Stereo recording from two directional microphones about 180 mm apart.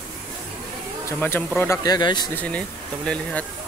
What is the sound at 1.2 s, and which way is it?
Speech, 10° left (ahead or behind).